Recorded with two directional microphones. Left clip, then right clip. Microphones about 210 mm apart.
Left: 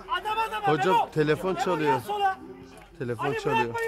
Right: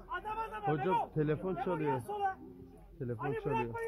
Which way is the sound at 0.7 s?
25° left (ahead or behind).